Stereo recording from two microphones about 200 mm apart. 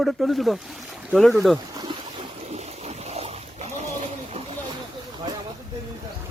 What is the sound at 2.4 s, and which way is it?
Boat, 30° right (ahead or behind).